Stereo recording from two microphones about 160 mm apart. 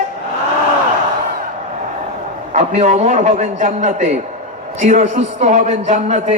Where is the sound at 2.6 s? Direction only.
45° right (ahead or behind).